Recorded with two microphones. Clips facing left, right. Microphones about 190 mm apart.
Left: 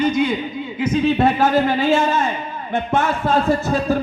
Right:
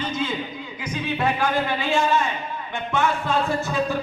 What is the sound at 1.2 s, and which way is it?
Speech, 40° left (ahead or behind).